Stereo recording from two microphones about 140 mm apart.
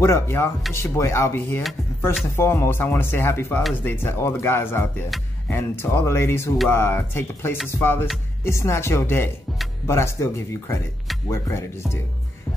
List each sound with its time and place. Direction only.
0.0 s speech: 20° left (ahead or behind)
5.1 s speech: centre (ahead or behind)
5.5 s speech: 15° left (ahead or behind)